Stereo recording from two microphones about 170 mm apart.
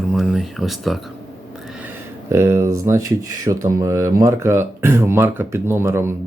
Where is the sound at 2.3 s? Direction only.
15° right (ahead or behind).